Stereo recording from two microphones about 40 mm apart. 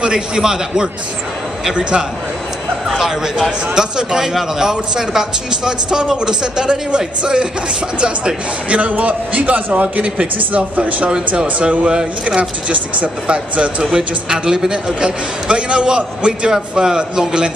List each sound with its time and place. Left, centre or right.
0.0 s a man's voice: centre
2.9 s speech: centre
3.7 s a man's voice: centre; by 11.1 s right
11.1 s a man's voice: right
12.4 s a man's voice: right; by 17.5 s centre